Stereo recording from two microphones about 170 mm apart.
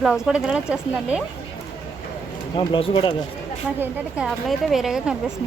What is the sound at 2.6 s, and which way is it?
Speech, 35° left (ahead or behind).